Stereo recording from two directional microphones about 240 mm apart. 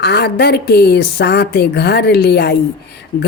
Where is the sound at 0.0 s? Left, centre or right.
Left.